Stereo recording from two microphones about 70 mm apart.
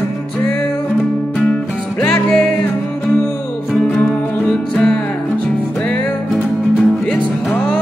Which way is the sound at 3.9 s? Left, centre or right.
Left.